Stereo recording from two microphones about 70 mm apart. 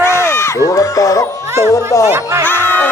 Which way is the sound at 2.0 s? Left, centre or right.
Right.